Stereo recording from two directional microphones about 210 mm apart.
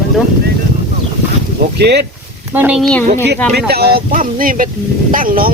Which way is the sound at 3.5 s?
50° right (ahead or behind).